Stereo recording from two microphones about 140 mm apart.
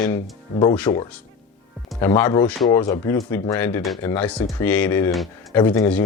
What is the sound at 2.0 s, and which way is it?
Speech, 15° left (ahead or behind).